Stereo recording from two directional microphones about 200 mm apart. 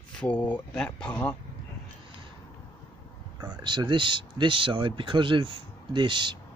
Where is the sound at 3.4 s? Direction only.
20° right (ahead or behind).